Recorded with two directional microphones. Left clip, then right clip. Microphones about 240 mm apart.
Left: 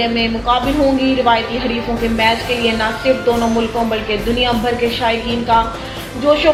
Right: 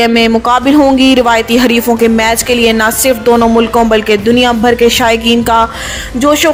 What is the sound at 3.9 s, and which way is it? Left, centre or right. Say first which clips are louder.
Speech: right 9 dB; right.